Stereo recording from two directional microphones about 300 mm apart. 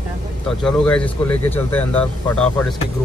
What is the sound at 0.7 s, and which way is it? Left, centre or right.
A man's voice, centre.